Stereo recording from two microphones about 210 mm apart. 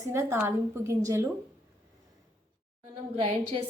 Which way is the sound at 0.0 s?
10° right (ahead or behind).